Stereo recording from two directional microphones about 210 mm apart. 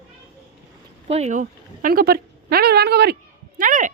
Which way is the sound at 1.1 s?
35° right (ahead or behind).